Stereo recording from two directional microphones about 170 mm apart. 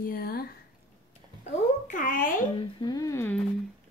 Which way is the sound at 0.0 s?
60° left (ahead or behind).